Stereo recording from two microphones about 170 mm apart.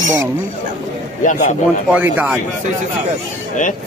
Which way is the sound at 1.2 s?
50° left (ahead or behind).